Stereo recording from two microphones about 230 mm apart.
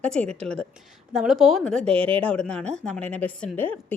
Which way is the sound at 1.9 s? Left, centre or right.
Right.